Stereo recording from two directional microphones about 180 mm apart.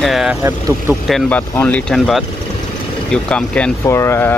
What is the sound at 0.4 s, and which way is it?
Speech, 20° right (ahead or behind).